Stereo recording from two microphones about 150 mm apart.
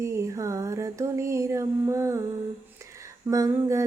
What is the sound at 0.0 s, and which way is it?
Female singing, 20° right (ahead or behind).